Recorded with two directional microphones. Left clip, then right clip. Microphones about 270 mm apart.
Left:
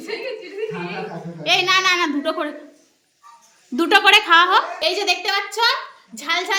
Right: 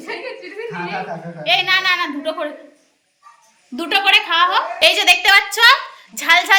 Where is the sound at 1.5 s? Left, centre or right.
Centre.